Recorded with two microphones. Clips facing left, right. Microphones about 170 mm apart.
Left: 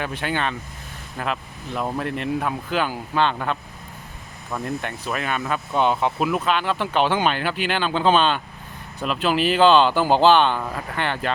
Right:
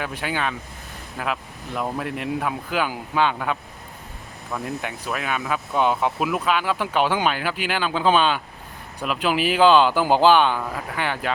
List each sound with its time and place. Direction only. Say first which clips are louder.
0.0 s speech: left 1 dB; 10° right (ahead or behind)
4.6 s speech: left 3 dB; 5° right (ahead or behind)